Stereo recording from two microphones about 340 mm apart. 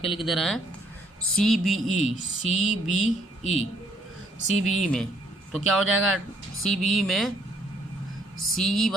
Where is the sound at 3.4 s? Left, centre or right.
Centre.